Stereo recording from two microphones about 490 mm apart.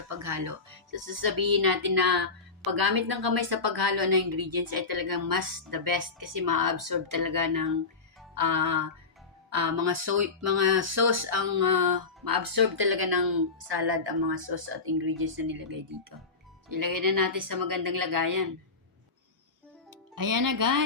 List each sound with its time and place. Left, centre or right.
0.1 s a woman's voice: right
20.1 s a woman's voice: right